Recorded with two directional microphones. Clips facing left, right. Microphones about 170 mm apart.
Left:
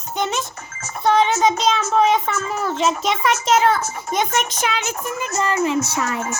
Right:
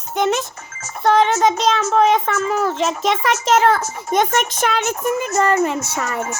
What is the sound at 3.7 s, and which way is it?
Speech, 55° right (ahead or behind).